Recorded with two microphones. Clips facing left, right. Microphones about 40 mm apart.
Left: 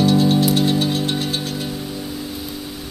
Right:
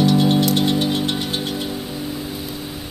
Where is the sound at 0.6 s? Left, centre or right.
Right.